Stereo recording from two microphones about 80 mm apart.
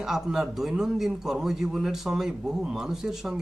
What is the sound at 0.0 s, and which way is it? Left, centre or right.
A man's voice, centre.